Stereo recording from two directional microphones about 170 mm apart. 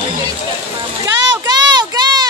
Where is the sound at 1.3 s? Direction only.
25° right (ahead or behind).